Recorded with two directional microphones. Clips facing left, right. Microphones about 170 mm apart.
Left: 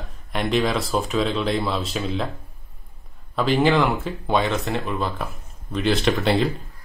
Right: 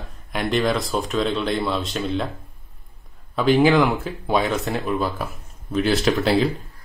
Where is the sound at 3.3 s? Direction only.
Centre (ahead or behind).